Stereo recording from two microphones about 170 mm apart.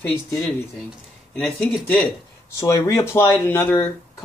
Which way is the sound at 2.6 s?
20° left (ahead or behind).